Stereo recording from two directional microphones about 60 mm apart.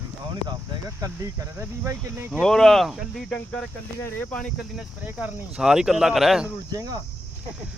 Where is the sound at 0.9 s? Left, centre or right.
Right.